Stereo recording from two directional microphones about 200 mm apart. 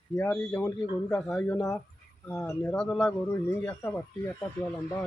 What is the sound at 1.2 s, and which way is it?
A man's voice, 5° left (ahead or behind).